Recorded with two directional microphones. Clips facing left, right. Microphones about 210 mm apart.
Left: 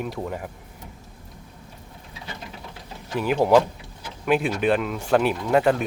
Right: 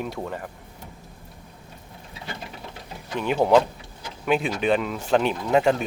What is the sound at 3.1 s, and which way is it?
Speech, 5° left (ahead or behind).